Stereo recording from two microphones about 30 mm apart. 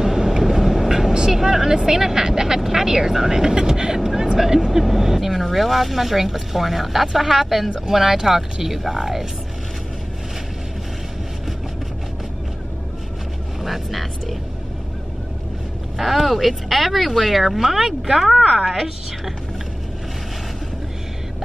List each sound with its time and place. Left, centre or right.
0.0 s vehicle: centre
4.0 s vehicle: centre
4.4 s speech: centre
13.6 s speech: centre
16.0 s speech: centre